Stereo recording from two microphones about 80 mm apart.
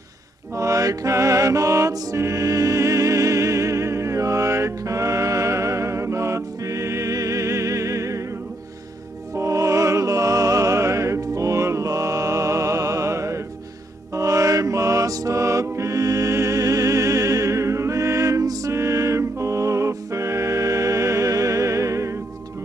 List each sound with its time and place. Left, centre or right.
0.6 s music: right
9.3 s music: right